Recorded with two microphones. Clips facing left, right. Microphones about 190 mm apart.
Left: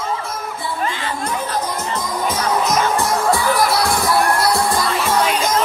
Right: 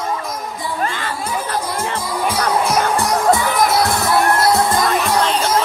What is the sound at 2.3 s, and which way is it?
Music, 10° right (ahead or behind).